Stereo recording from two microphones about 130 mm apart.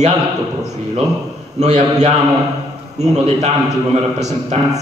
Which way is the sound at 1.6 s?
60° right (ahead or behind).